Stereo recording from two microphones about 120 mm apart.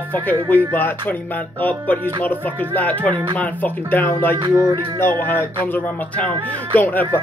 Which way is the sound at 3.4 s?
15° left (ahead or behind).